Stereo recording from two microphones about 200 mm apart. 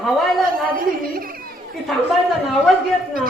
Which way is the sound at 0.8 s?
45° right (ahead or behind).